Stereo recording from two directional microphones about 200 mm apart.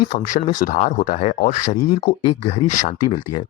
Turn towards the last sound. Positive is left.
turn(degrees=40)  # may be behind; listen again after turning